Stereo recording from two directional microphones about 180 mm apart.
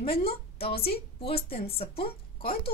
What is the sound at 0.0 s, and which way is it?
A woman's voice, 30° left (ahead or behind).